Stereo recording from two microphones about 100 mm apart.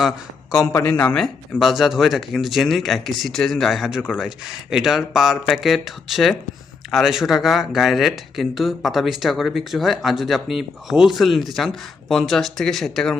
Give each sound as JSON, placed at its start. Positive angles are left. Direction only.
{"t": 0.7, "sound": "speech", "side_deg": 25}
{"t": 1.0, "sound": "speech", "side_deg": 5}